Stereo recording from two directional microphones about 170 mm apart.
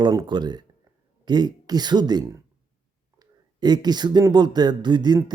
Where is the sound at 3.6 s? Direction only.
25° right (ahead or behind).